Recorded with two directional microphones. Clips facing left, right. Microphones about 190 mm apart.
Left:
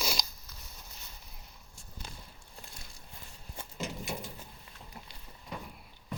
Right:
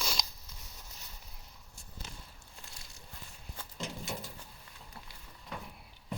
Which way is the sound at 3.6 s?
15° left (ahead or behind).